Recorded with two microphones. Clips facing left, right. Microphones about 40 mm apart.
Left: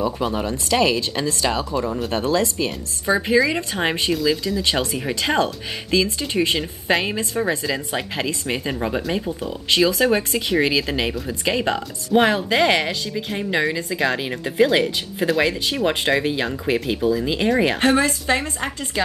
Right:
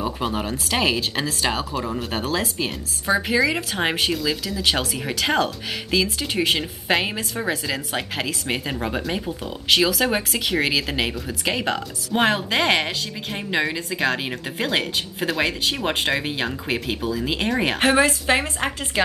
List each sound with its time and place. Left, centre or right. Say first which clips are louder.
0.2 s speech: left 2 dB; centre
1.9 s speech: left 3 dB; centre
2.1 s speech: left 5 dB; centre
17.4 s speech: left 4 dB; centre
17.6 s speech: even; centre